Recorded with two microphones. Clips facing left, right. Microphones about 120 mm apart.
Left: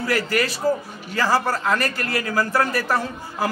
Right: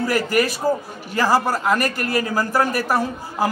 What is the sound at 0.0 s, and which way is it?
A man's voice, 15° right (ahead or behind).